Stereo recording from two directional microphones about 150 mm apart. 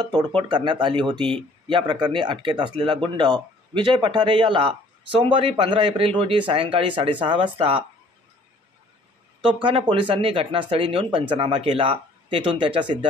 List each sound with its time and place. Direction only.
0.0 s speech: 30° right (ahead or behind)
9.4 s speech: 35° right (ahead or behind)